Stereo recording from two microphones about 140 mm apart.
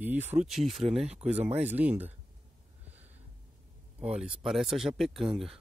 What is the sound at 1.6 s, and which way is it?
Speech, 15° right (ahead or behind).